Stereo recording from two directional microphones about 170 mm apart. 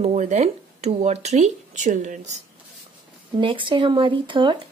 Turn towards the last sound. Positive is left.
turn(degrees=-30)  # may be behind; listen again after turning